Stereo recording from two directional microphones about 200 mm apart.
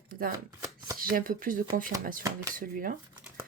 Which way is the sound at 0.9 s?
45° right (ahead or behind).